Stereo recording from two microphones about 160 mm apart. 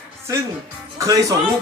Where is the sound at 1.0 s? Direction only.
20° right (ahead or behind).